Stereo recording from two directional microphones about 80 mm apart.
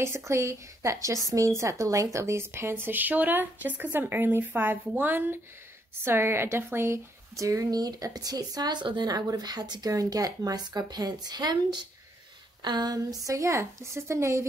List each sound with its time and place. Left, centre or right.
0.0 s a woman's voice: right